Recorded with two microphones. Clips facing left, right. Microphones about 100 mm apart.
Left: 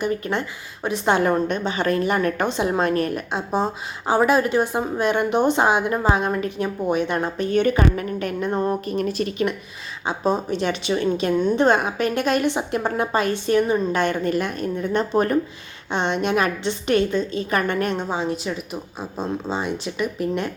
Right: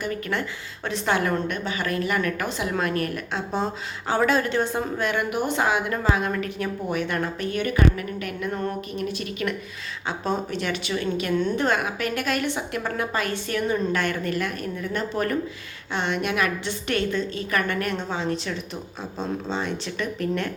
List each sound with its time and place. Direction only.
0.0 s a woman's voice: 20° left (ahead or behind); by 9.3 s 40° left (ahead or behind)
10.1 s a woman's voice: 20° left (ahead or behind)